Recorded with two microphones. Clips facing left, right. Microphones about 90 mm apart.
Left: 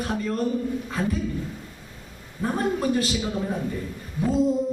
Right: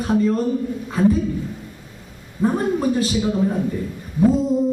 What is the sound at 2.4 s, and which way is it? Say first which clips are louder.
Speech: right 5 dB; 20° right (ahead or behind).